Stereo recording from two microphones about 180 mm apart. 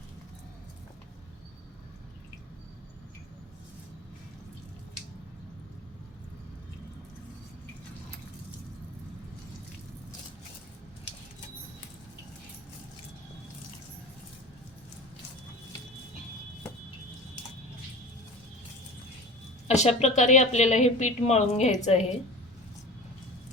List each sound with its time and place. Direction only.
19.6 s speech: 40° left (ahead or behind)